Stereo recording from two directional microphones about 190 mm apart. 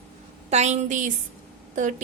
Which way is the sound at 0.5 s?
40° right (ahead or behind).